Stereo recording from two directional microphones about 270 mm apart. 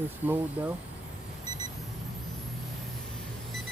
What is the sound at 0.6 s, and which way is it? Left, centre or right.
Speech, centre.